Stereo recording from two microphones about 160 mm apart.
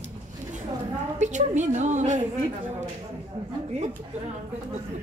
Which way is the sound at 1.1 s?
50° right (ahead or behind).